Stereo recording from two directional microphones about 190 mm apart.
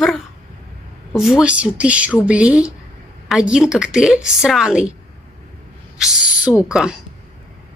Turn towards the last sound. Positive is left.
turn(degrees=-5)  # may be behind; listen again after turning